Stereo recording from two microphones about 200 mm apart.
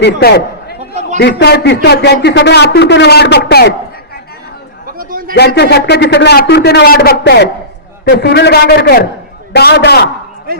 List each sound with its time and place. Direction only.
0.0 s a man's voice: 50° left (ahead or behind)
4.9 s a sound: 45° right (ahead or behind)
5.5 s a man's voice: 55° left (ahead or behind)
10.5 s speech: 50° right (ahead or behind)